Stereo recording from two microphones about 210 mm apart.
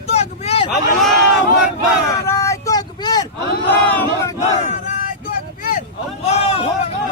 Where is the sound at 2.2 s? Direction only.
15° left (ahead or behind).